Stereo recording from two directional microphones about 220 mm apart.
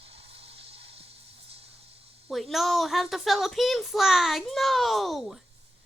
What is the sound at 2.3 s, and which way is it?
A child's voice, centre (ahead or behind).